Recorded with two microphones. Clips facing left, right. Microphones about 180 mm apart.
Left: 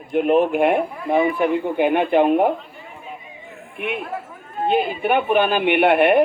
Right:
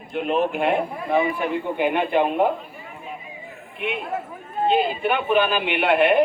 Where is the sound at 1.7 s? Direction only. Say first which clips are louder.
Left 3 dB; 15° left (ahead or behind).